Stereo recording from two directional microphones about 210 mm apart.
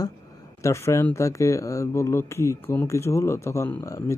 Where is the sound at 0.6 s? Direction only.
15° left (ahead or behind).